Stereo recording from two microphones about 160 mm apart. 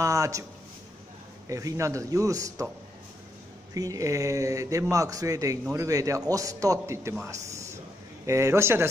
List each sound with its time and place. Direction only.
0.0 s speech: 20° right (ahead or behind)
1.5 s speech: 20° right (ahead or behind)
3.7 s a man's voice: 20° right (ahead or behind)